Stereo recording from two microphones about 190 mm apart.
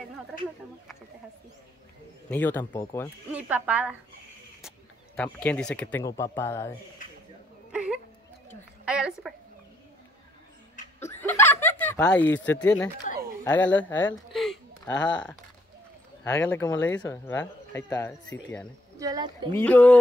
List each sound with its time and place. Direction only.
2.2 s speech: 10° left (ahead or behind)
3.3 s speech: 10° right (ahead or behind); by 6.7 s 15° left (ahead or behind)
7.7 s whimper: 5° right (ahead or behind)
8.8 s a sound: 5° right (ahead or behind)
11.0 s chuckle: 10° left (ahead or behind)
11.8 s speech: 10° left (ahead or behind)
13.4 s a sound: 10° left (ahead or behind)
16.3 s speech: 15° left (ahead or behind)
18.9 s speech: 20° right (ahead or behind)
19.5 s speech: 10° left (ahead or behind)